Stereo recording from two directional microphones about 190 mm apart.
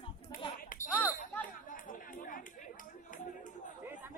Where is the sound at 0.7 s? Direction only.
45° left (ahead or behind).